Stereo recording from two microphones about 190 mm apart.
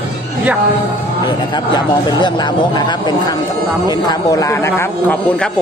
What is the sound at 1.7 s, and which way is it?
Speech, 25° left (ahead or behind).